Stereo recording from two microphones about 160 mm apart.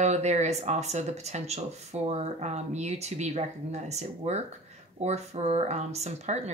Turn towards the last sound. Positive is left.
turn(degrees=-45)  # may be behind; listen again after turning